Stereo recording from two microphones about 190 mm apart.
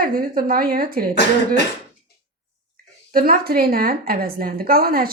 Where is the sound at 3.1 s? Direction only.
50° right (ahead or behind).